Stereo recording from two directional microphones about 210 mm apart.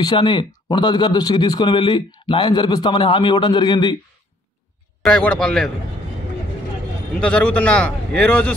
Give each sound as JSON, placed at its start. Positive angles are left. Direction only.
{"t": 0.0, "sound": "speech", "side_deg": 20}
{"t": 5.0, "sound": "a man's voice", "side_deg": 5}
{"t": 7.2, "sound": "a man's voice", "side_deg": 5}